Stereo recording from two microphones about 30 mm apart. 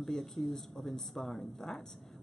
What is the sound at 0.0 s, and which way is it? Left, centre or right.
Speech, centre.